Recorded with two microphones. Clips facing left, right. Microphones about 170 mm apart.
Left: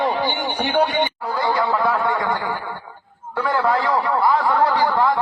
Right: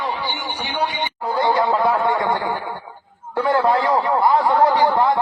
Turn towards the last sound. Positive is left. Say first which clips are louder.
# right 2 dB
turn(degrees=-20)  # may be behind; listen again after turning